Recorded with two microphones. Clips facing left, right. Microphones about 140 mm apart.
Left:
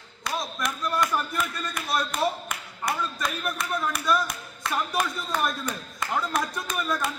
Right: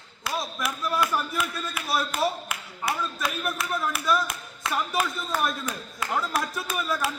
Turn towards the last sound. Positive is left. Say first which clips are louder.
# even
turn(degrees=-5)  # may be behind; listen again after turning